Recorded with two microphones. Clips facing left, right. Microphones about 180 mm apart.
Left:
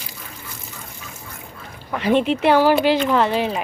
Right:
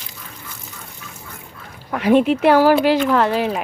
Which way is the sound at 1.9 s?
5° right (ahead or behind).